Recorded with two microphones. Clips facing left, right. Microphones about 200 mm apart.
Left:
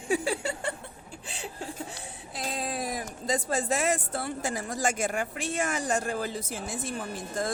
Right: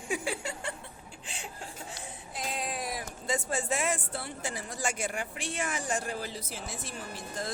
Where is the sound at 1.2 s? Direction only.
35° left (ahead or behind).